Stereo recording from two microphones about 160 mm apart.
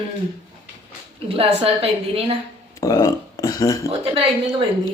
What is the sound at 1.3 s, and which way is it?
A woman's voice, 35° right (ahead or behind).